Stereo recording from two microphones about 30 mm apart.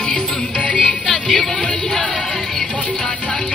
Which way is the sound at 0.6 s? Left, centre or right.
Left.